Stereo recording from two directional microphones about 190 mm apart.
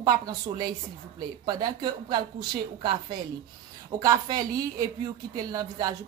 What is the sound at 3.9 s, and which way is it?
A woman's voice, 20° right (ahead or behind).